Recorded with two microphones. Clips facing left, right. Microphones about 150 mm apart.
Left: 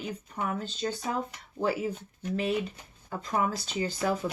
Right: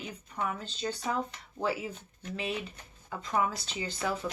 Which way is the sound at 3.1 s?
40° left (ahead or behind).